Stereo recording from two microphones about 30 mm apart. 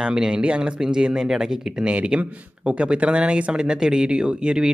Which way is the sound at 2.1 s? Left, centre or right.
Right.